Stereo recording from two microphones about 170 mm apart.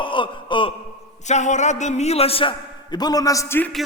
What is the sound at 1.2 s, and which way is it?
A man's voice, 45° left (ahead or behind).